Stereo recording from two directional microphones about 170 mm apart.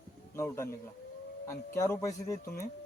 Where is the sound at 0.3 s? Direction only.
15° left (ahead or behind).